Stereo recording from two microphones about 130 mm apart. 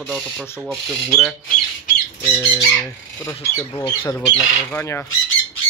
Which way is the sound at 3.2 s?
20° left (ahead or behind).